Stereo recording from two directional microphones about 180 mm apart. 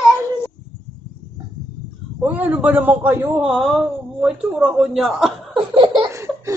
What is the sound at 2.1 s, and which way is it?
A man's voice, 10° right (ahead or behind).